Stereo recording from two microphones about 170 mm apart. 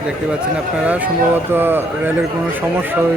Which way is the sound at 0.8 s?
10° right (ahead or behind).